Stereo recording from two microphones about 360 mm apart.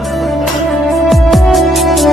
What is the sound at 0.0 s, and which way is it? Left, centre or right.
Music, centre.